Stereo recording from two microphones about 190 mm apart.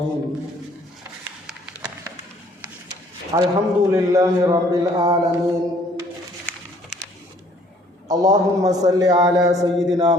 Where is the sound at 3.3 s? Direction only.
20° right (ahead or behind).